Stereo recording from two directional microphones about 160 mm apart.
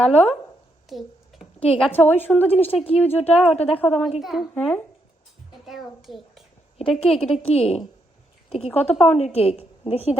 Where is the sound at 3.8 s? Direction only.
5° left (ahead or behind).